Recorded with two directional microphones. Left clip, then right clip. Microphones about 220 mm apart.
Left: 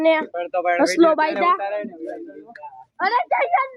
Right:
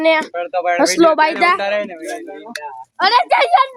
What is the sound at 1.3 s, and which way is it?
Speech, 25° right (ahead or behind).